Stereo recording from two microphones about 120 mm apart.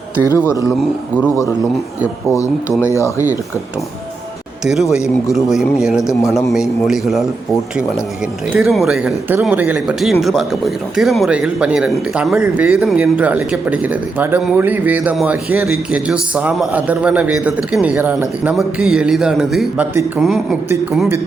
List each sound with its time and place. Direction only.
0.2 s speech: 20° left (ahead or behind)
2.3 s speech: 25° left (ahead or behind)
4.6 s a man's voice: 5° right (ahead or behind)
8.5 s a man's voice: centre (ahead or behind)
18.5 s a man's voice: 5° right (ahead or behind)
19.8 s speech: 20° right (ahead or behind)
20.1 s a man's voice: 5° right (ahead or behind)